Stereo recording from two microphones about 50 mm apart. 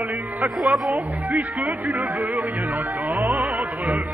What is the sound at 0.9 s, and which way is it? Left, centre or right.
Music, right.